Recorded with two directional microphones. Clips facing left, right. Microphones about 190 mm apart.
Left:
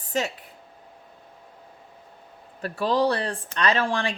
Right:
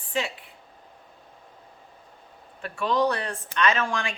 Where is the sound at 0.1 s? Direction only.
40° left (ahead or behind).